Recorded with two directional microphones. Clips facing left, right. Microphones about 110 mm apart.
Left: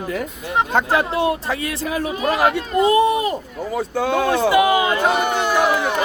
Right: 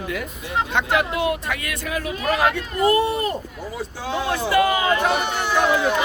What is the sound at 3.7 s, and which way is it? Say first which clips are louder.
Speech: left 8 dB; 60° left (ahead or behind).